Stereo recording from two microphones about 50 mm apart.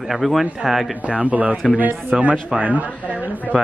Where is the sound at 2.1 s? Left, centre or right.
Centre.